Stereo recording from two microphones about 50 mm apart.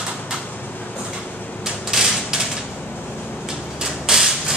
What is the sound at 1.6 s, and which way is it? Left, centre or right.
Mechanisms, centre.